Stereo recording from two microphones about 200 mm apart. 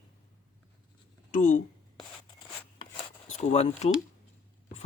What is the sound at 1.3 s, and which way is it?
Speech, 40° left (ahead or behind).